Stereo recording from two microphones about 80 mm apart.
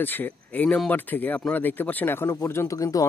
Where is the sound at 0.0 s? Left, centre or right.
Left.